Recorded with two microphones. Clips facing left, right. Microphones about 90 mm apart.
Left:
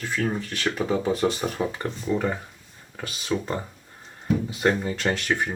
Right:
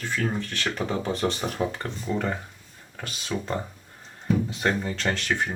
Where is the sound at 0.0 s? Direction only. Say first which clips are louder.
Left 1 dB; 10° left (ahead or behind).